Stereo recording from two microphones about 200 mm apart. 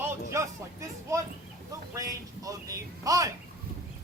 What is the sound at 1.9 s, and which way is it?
A man's voice, 15° right (ahead or behind).